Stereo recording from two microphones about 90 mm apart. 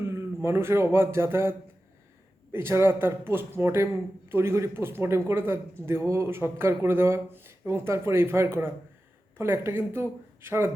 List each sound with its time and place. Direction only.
0.0 s speech: 30° right (ahead or behind)